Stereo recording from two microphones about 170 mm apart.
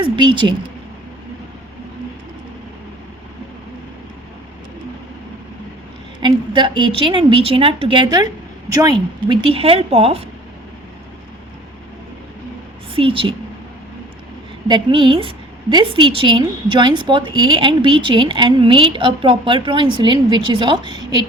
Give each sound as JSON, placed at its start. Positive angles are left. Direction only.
{"t": 0.0, "sound": "a woman's voice", "side_deg": -25}
{"t": 6.1, "sound": "a woman's voice", "side_deg": -25}
{"t": 12.9, "sound": "a woman's voice", "side_deg": -30}
{"t": 14.7, "sound": "a woman's voice", "side_deg": -30}